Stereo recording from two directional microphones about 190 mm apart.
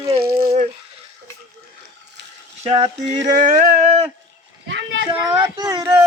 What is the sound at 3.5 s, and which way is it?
Speech, 40° right (ahead or behind).